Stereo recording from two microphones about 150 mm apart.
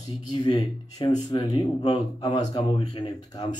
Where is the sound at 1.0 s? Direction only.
25° left (ahead or behind).